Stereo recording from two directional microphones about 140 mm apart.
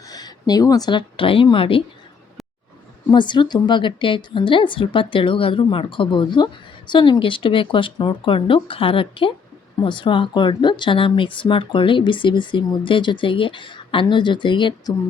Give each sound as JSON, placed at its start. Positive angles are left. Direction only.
{"t": 0.1, "sound": "speech", "side_deg": 30}
{"t": 3.1, "sound": "a woman's voice", "side_deg": 35}